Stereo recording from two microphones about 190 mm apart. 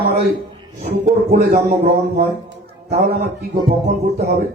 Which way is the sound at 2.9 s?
50° right (ahead or behind).